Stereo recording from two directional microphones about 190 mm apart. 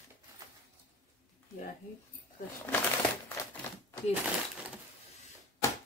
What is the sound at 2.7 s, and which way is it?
Crumpling, 10° left (ahead or behind).